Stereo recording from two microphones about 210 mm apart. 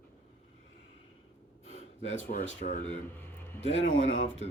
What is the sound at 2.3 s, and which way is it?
Speech, 35° left (ahead or behind).